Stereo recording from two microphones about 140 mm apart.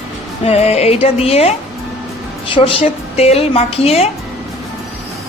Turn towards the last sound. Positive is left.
turn(degrees=50)  # may be behind; listen again after turning